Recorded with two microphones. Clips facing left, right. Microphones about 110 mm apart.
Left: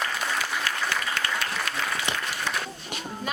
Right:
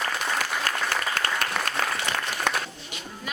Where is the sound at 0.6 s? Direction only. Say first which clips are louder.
Right 1 dB; 45° right (ahead or behind).